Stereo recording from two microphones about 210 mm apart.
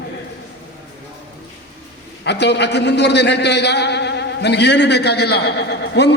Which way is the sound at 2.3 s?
55° left (ahead or behind).